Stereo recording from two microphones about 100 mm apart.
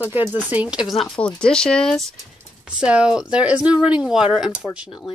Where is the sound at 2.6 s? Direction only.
10° right (ahead or behind).